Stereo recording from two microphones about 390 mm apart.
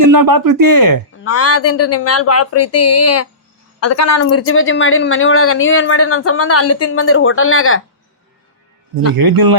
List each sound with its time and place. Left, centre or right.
0.1 s speech: right
1.2 s speech: left
9.1 s speech: right